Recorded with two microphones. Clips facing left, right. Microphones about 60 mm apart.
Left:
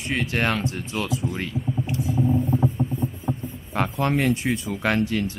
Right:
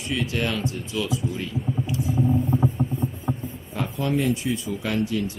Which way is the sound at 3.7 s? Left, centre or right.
Left.